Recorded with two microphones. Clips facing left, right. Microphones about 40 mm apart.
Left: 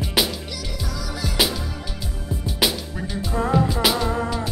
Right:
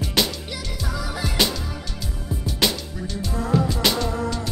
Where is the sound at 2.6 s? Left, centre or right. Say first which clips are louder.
Left 1 dB; centre.